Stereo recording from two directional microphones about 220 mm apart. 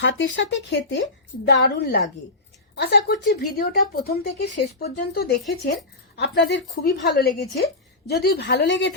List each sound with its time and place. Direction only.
0.0 s speech: 60° left (ahead or behind)